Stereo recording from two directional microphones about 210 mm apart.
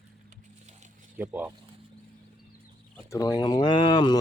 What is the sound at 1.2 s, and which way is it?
Speech, 10° right (ahead or behind).